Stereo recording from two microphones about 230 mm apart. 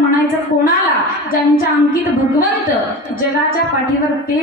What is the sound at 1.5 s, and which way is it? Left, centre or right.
Music, left.